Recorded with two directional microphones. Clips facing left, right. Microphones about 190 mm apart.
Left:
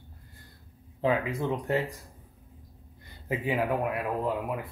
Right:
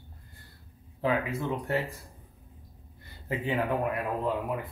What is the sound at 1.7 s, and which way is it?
Speech, 20° left (ahead or behind).